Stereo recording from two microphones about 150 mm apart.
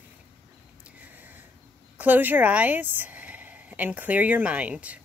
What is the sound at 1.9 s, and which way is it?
Speech, 10° right (ahead or behind).